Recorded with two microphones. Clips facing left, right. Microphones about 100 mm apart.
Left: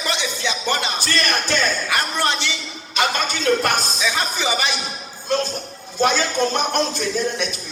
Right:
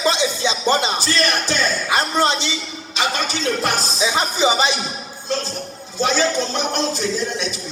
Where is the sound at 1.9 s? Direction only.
20° right (ahead or behind).